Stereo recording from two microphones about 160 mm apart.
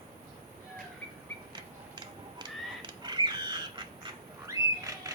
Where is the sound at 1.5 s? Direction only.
30° right (ahead or behind).